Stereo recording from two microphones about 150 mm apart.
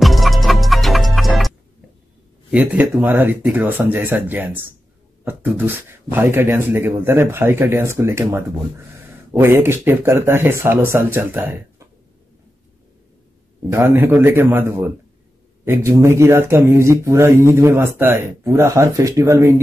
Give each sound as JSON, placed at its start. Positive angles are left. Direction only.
{"t": 0.0, "sound": "music", "side_deg": 0}
{"t": 2.5, "sound": "speech", "side_deg": -10}
{"t": 13.7, "sound": "speech", "side_deg": -15}